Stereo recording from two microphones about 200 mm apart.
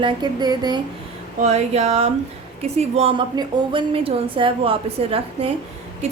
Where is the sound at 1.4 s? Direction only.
35° right (ahead or behind).